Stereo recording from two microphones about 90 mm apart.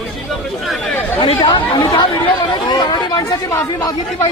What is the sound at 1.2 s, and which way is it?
A man's voice, 70° left (ahead or behind).